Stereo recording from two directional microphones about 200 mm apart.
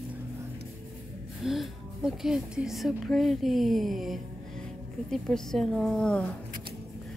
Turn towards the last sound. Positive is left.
turn(degrees=5)  # may be behind; listen again after turning